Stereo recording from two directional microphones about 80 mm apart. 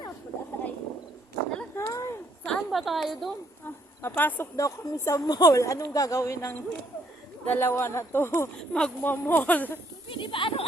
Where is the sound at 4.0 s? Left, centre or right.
Left.